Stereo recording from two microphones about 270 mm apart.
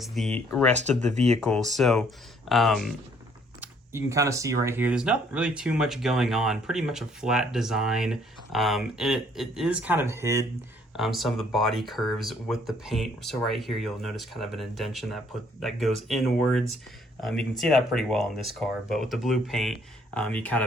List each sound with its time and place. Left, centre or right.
0.0 s speech: centre
1.1 s speech: right
1.5 s speech: centre
3.6 s speech: centre